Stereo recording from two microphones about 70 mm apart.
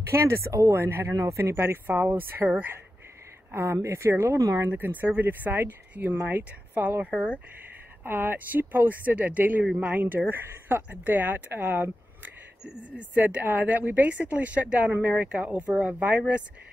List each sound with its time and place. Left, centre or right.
0.1 s speech: right
0.8 s speech: right; by 16.4 s centre